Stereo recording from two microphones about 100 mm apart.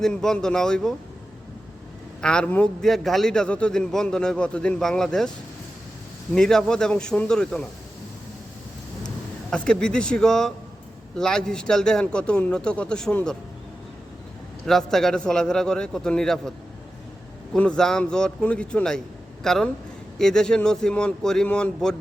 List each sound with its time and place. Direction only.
0.0 s a man's voice: 5° left (ahead or behind)
2.2 s a man's voice: 10° left (ahead or behind)
6.3 s a man's voice: 5° left (ahead or behind)
9.5 s a man's voice: 10° left (ahead or behind)
14.7 s a man's voice: 5° left (ahead or behind)
17.5 s a man's voice: 5° left (ahead or behind)